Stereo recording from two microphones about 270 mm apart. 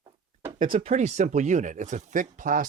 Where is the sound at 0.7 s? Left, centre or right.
Right.